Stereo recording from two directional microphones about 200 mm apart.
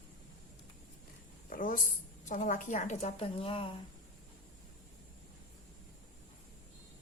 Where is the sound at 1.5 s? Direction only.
45° left (ahead or behind); by 3.7 s 25° left (ahead or behind).